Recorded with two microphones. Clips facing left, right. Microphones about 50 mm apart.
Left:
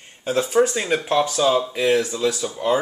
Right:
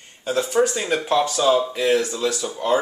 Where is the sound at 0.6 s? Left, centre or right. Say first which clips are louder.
Left 1 dB; centre.